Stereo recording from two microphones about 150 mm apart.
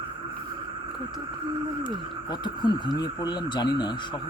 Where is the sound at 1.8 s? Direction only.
30° left (ahead or behind).